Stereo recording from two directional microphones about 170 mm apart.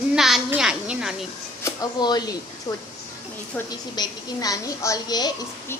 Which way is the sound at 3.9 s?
20° left (ahead or behind).